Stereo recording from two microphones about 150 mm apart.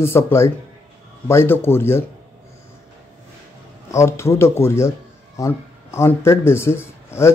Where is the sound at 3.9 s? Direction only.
20° left (ahead or behind).